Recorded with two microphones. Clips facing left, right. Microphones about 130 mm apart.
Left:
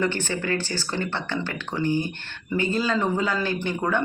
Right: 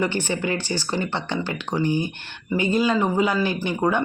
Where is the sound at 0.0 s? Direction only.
15° right (ahead or behind).